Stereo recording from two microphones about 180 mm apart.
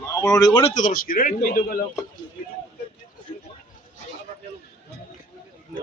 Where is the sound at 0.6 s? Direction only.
45° left (ahead or behind).